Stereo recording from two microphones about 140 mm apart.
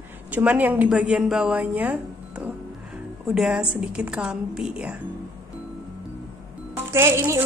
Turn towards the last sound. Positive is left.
turn(degrees=-20)  # may be behind; listen again after turning